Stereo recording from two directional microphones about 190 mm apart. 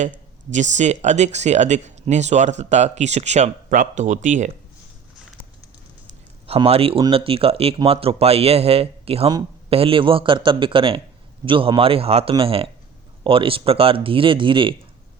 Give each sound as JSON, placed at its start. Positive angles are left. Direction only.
{"t": 0.5, "sound": "speech", "side_deg": -40}
{"t": 6.5, "sound": "speech", "side_deg": -30}